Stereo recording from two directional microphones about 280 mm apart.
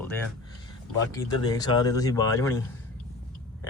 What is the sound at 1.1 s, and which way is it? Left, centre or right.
Speech, centre.